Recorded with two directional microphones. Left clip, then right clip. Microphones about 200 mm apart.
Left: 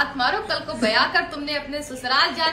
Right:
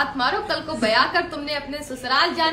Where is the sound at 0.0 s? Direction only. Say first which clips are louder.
Even; 25° right (ahead or behind).